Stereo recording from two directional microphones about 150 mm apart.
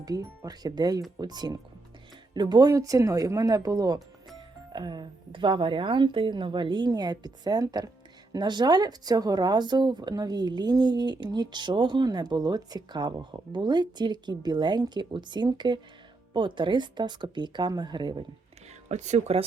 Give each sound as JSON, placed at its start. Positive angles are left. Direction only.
{"t": 0.0, "sound": "speech", "side_deg": -25}
{"t": 18.9, "sound": "speech", "side_deg": -50}